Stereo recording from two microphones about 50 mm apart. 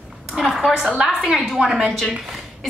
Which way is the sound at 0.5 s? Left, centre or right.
Centre.